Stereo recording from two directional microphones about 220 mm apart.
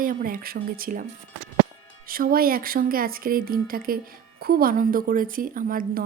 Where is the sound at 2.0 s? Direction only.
40° right (ahead or behind).